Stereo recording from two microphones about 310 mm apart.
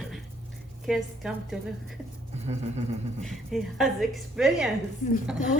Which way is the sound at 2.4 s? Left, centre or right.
Right.